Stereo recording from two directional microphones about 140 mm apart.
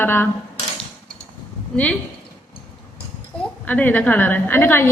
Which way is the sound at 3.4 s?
10° left (ahead or behind).